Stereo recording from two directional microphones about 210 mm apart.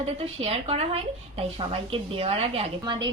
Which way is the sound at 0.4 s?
30° right (ahead or behind).